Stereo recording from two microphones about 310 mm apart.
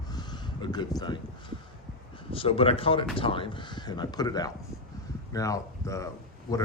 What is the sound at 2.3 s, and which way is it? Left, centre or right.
Speech, centre.